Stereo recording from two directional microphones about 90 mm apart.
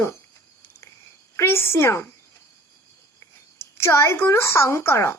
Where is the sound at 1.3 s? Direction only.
25° left (ahead or behind).